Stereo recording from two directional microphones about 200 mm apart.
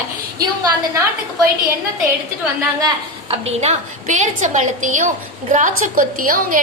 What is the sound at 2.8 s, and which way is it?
A woman's voice, 30° right (ahead or behind).